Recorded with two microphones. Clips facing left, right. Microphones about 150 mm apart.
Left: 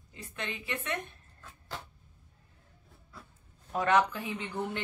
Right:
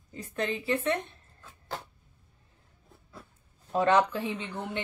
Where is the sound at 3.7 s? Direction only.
30° right (ahead or behind).